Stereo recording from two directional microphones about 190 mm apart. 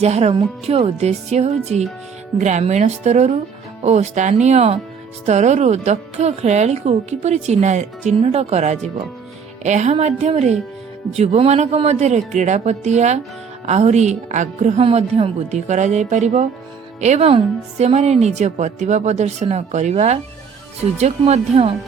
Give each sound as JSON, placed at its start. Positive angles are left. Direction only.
{"t": 0.0, "sound": "a woman's voice", "side_deg": -35}